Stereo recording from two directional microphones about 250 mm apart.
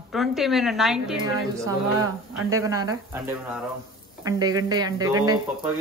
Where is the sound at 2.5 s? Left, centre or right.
Centre.